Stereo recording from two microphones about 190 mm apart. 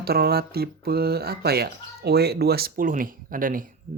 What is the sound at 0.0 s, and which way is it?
Speech, 55° right (ahead or behind).